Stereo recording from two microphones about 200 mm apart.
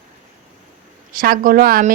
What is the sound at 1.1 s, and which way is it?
Speech, 45° right (ahead or behind).